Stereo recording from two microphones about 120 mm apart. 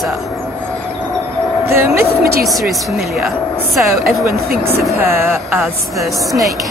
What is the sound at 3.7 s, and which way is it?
Speech, centre (ahead or behind).